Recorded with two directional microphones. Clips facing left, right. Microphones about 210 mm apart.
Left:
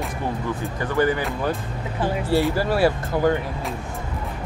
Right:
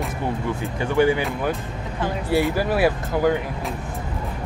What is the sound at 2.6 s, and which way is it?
Speech, 15° right (ahead or behind).